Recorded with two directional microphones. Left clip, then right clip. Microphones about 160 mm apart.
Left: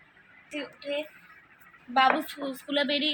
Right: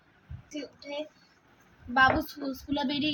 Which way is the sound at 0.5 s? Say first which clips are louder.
Left 4 dB; centre (ahead or behind).